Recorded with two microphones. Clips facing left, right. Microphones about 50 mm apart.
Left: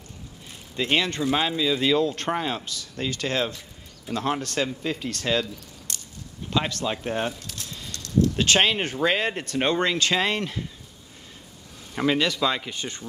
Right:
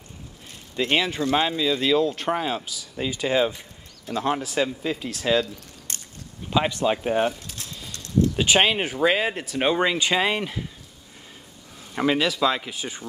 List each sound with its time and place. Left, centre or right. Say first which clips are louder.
0.7 s speech: right 1 dB; centre
5.9 s biting: even; right
6.5 s speech: right 4 dB; centre
7.9 s a sound: even; right
8.4 s speech: right 3 dB; centre
11.9 s speech: right 1 dB; centre